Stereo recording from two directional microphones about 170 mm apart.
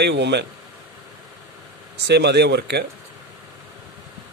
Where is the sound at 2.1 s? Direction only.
85° right.